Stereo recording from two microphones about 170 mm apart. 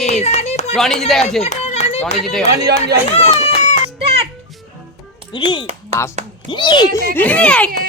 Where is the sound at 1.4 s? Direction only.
40° left (ahead or behind).